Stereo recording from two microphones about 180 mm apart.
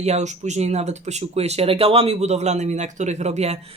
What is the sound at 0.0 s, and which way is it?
Speech, 40° right (ahead or behind).